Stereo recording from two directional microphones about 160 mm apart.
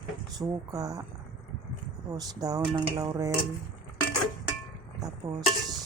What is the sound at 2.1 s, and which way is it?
Speech, 25° right (ahead or behind).